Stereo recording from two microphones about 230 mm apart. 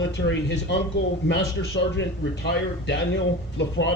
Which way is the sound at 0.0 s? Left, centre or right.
Left.